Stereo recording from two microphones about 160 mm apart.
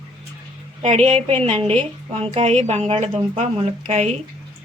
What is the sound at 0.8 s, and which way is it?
A woman's voice, 45° right (ahead or behind).